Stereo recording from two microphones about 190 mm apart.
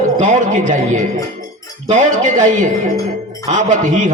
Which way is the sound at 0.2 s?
40° right (ahead or behind).